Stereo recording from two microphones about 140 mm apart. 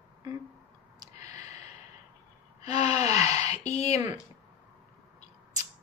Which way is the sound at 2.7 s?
50° left (ahead or behind).